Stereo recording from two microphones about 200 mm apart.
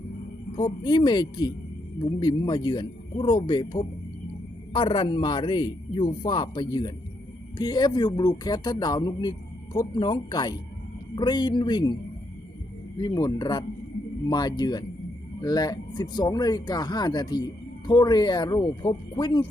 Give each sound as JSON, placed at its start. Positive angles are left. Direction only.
{"t": 0.9, "sound": "a man's voice", "side_deg": 20}
{"t": 13.0, "sound": "a man's voice", "side_deg": 20}